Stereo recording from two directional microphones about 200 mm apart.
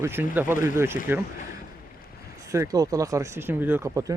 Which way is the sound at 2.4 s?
15° right (ahead or behind).